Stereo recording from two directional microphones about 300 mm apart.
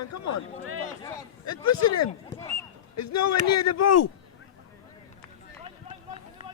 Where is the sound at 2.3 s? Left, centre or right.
Centre.